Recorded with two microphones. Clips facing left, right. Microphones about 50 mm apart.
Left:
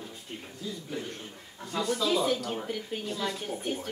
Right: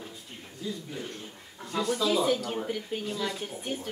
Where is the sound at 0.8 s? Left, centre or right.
Centre.